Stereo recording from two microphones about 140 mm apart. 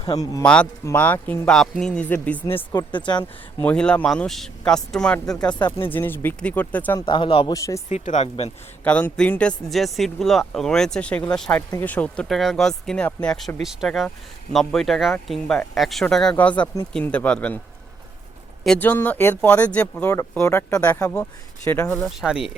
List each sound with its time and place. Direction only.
0.0 s a man's voice: 25° left (ahead or behind)
0.4 s speech: 10° left (ahead or behind)
2.7 s speech: 30° left (ahead or behind)
3.6 s speech: 10° left (ahead or behind)
5.5 s speech: 35° left (ahead or behind)
5.9 s speech: 15° left (ahead or behind)
7.0 s speech: 35° left (ahead or behind)
7.5 s a man's voice: 25° left (ahead or behind)
7.9 s speech: 55° left (ahead or behind)
8.8 s speech: 10° left (ahead or behind)
18.6 s speech: 10° left (ahead or behind)
21.8 s speech: 5° left (ahead or behind)